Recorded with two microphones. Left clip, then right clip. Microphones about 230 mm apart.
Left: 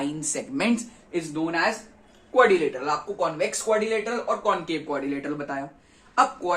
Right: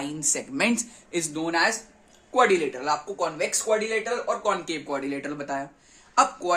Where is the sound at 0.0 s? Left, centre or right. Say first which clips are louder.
Even; right.